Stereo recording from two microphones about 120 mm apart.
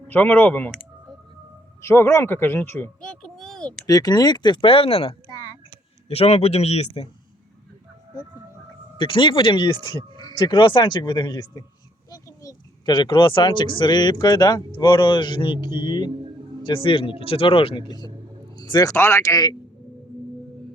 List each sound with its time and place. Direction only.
0.1 s speech: 15° left (ahead or behind)
1.8 s speech: 20° left (ahead or behind); by 3.8 s 5° left (ahead or behind)
3.8 s speech: 30° left (ahead or behind); by 5.1 s 50° left (ahead or behind)
5.3 s a sound: 30° left (ahead or behind)
6.1 s a man's voice: 60° left (ahead or behind)
9.0 s speech: 45° left (ahead or behind)
12.1 s a sound: 30° left (ahead or behind)
12.9 s speech: 40° left (ahead or behind)
18.5 s a sound: 35° left (ahead or behind)
18.9 s speech: 20° left (ahead or behind)